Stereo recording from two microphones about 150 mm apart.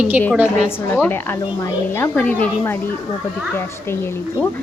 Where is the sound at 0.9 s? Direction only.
15° left (ahead or behind).